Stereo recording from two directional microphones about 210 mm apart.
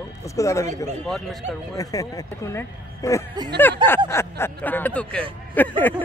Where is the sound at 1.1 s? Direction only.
Centre (ahead or behind).